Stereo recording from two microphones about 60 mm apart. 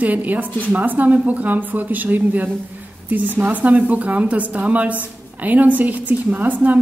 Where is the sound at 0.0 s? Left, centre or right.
Right.